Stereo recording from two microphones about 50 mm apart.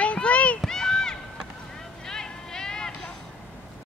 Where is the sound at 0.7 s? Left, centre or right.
Centre.